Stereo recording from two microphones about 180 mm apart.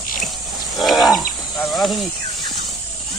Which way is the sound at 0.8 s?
Centre (ahead or behind).